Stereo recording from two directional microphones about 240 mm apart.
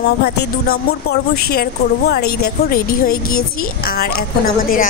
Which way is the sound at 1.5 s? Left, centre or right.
Left.